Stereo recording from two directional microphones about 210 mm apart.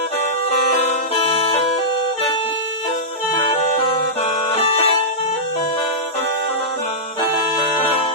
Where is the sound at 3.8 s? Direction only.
30° left (ahead or behind).